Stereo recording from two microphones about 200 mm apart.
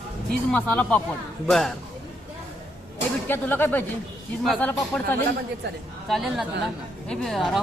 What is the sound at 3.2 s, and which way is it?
Speech, 10° left (ahead or behind).